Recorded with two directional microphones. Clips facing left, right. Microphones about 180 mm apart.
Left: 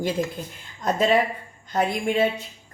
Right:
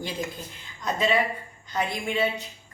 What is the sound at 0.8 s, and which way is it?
A woman's voice, 45° left (ahead or behind).